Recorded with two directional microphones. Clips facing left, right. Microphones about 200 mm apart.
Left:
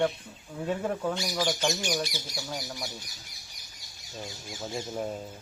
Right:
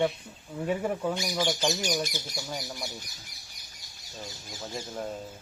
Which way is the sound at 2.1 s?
50° right (ahead or behind).